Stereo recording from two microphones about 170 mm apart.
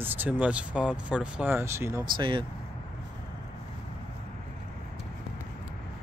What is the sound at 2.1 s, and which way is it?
Speech, 30° right (ahead or behind).